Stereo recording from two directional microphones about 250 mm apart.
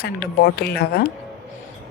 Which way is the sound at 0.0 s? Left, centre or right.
Left.